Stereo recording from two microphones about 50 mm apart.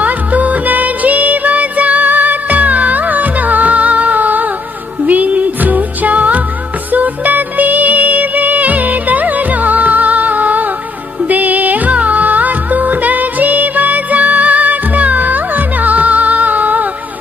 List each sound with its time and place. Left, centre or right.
0.0 s music: right